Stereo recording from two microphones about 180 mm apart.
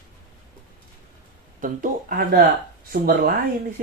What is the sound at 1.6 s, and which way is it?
Speech, 50° right (ahead or behind).